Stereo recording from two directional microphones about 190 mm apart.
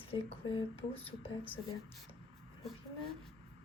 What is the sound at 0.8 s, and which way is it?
Speech, 30° left (ahead or behind).